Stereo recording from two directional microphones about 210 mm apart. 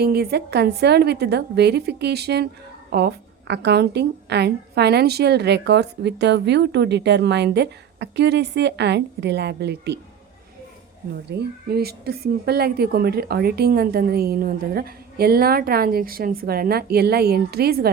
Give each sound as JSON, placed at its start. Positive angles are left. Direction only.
{"t": 0.0, "sound": "a woman's voice", "side_deg": -50}
{"t": 11.3, "sound": "a woman's voice", "side_deg": -50}